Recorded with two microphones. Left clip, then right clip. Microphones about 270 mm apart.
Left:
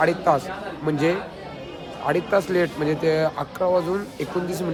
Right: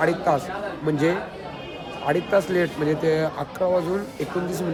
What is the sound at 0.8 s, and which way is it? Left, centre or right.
Speech, centre.